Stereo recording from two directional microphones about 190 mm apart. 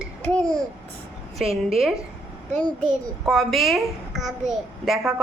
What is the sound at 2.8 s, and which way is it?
A child's voice, centre (ahead or behind).